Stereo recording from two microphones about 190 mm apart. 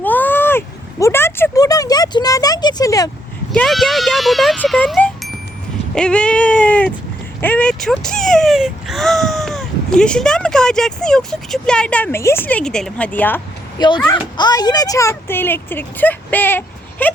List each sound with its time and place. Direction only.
0.0 s a sound: 10° left (ahead or behind)
3.5 s speech: 5° left (ahead or behind)
13.7 s speech: 25° left (ahead or behind)